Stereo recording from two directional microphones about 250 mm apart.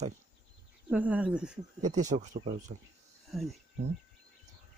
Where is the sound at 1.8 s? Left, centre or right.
Right.